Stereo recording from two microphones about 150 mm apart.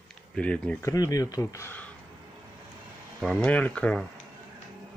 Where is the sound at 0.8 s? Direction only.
25° left (ahead or behind).